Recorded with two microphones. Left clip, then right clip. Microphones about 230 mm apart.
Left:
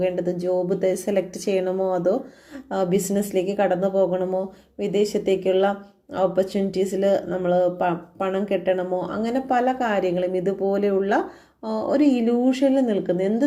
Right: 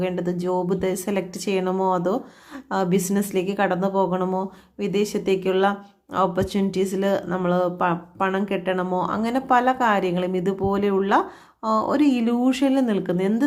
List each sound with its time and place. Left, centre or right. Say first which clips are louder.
0.0 s speech: left 2 dB; centre